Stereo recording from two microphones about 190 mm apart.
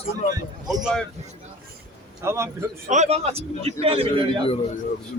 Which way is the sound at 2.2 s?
15° right (ahead or behind).